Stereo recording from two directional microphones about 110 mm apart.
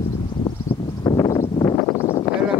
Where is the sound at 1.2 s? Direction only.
30° left (ahead or behind).